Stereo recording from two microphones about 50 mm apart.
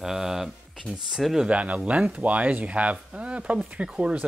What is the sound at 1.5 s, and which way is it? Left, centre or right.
Speech, right.